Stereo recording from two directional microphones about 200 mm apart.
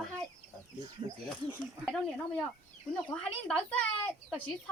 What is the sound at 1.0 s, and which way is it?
Speech, 25° right (ahead or behind).